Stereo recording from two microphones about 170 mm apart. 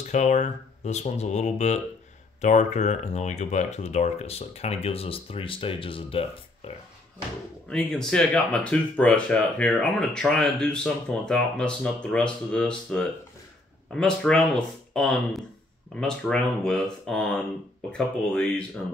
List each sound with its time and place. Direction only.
0.1 s speech: 45° left (ahead or behind)
7.7 s speech: 5° left (ahead or behind)